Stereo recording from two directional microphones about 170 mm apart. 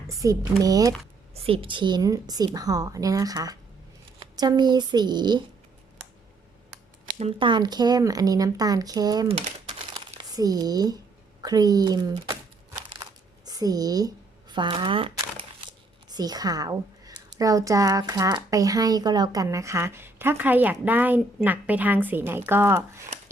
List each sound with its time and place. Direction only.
0.1 s a woman's voice: 20° right (ahead or behind)
1.3 s a woman's voice: 35° right (ahead or behind)
7.0 s a woman's voice: 40° right (ahead or behind); by 9.3 s 20° right (ahead or behind)
9.9 s crumpling: 25° right (ahead or behind)
11.4 s a woman's voice: 20° right (ahead or behind)
13.0 s a sound: 25° right (ahead or behind)
14.5 s a woman's voice: 25° right (ahead or behind)